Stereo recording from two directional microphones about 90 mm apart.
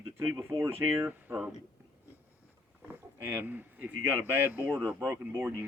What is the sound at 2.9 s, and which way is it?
Speech, 20° right (ahead or behind).